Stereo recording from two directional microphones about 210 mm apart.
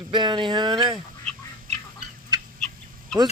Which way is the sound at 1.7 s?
30° right (ahead or behind).